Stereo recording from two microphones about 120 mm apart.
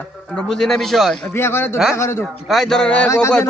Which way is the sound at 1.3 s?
20° left (ahead or behind).